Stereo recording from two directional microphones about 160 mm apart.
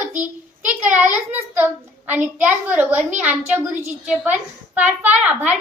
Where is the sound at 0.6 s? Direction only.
10° right (ahead or behind).